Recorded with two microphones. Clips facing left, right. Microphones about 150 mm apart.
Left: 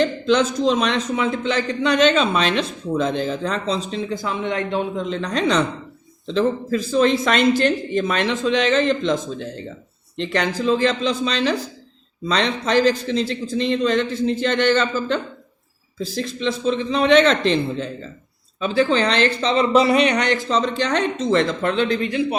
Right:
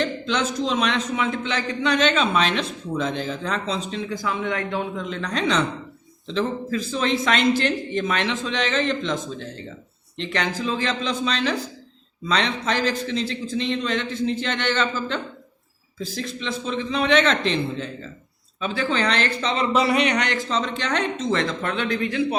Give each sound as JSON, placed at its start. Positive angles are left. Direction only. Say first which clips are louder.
{"t": 0.0, "sound": "a man's voice", "louder": "left 6 dB", "side_deg": 40}